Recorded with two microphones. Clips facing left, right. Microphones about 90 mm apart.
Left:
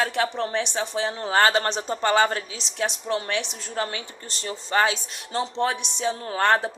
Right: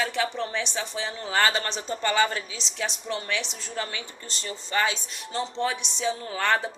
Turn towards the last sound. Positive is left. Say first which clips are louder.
# left 4 dB
turn(degrees=50)  # may be behind; listen again after turning